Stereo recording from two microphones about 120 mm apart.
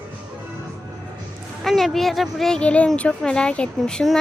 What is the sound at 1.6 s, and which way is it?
Speech, centre (ahead or behind).